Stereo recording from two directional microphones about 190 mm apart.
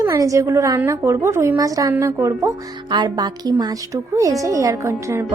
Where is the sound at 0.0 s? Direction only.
15° right (ahead or behind).